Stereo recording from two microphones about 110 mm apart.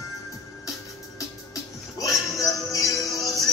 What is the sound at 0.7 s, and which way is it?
Music, 30° left (ahead or behind).